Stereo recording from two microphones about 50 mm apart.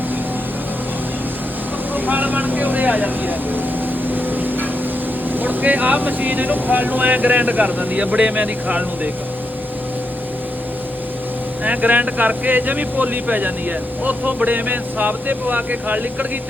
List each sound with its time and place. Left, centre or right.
2.0 s speech: right
4.1 s vehicle: right
5.3 s speech: right
7.9 s speech: right
11.6 s speech: right